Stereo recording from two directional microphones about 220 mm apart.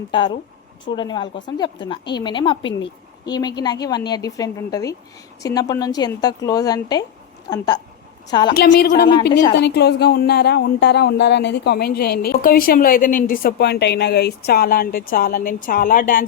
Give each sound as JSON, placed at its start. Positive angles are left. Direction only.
{"t": 0.1, "sound": "a woman's voice", "side_deg": 20}
{"t": 8.5, "sound": "speech", "side_deg": 50}
{"t": 9.3, "sound": "speech", "side_deg": 20}
{"t": 9.6, "sound": "speech", "side_deg": 50}